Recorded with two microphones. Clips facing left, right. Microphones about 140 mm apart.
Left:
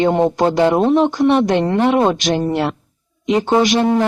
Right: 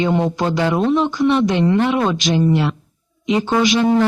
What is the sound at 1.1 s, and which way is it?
Speech, 55° left (ahead or behind).